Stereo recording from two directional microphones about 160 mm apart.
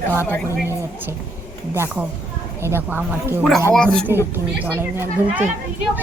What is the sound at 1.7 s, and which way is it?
Speech, 15° right (ahead or behind).